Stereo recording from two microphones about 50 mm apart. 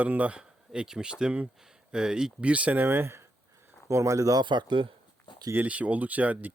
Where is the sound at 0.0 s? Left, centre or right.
Right.